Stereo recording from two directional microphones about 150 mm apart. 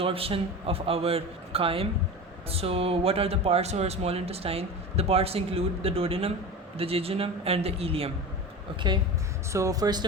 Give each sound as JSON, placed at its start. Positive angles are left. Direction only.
{"t": 0.0, "sound": "speech", "side_deg": -40}
{"t": 9.5, "sound": "speech", "side_deg": -20}